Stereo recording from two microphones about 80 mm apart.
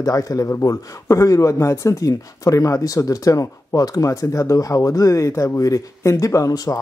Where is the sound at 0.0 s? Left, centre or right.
Left.